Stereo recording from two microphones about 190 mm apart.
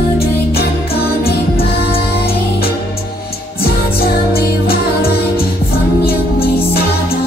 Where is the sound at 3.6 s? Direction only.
55° left (ahead or behind).